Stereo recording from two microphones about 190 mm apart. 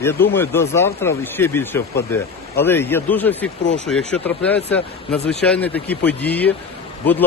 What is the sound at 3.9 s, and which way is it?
Speech, 5° left (ahead or behind).